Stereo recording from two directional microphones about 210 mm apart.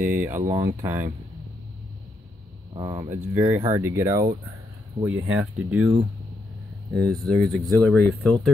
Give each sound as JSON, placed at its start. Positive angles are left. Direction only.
{"t": 0.0, "sound": "speech", "side_deg": -10}
{"t": 0.4, "sound": "speech", "side_deg": -35}
{"t": 0.7, "sound": "speech", "side_deg": -10}
{"t": 2.7, "sound": "speech", "side_deg": -20}
{"t": 3.2, "sound": "speech", "side_deg": -10}
{"t": 7.2, "sound": "speech", "side_deg": 0}